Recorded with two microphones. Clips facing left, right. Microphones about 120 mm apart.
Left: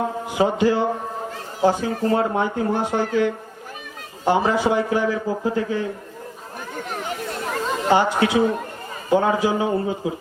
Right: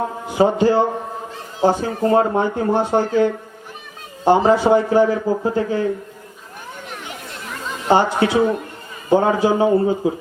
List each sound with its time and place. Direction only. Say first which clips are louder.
0.3 s speech: right 4 dB; 35° right (ahead or behind)
6.9 s chatter: left 8 dB; 40° left (ahead or behind)
7.9 s speech: right 3 dB; 35° right (ahead or behind)